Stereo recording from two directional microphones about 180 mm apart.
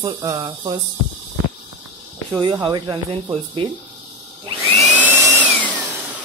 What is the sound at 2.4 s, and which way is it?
Speech, 25° right (ahead or behind).